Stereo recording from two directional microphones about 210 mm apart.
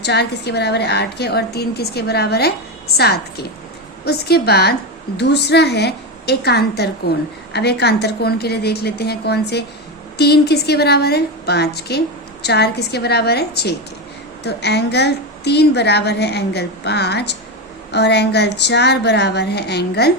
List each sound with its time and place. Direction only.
0.0 s a woman's voice: 50° left (ahead or behind)